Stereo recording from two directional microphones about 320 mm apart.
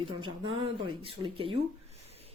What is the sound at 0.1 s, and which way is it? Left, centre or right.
Speech, centre.